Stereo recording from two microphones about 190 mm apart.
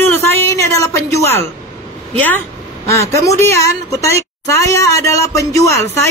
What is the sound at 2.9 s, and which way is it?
A woman's voice, 15° left (ahead or behind).